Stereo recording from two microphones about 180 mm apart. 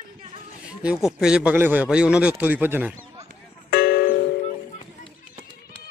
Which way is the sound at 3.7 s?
60° left (ahead or behind).